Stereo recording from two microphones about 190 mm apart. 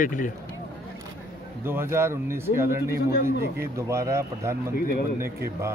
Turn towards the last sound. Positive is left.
turn(degrees=-15)  # may be behind; listen again after turning